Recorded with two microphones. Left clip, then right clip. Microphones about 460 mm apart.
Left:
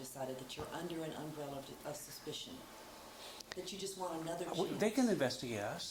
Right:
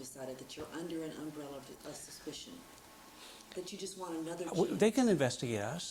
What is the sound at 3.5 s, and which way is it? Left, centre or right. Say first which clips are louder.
Speech: right 3 dB; left.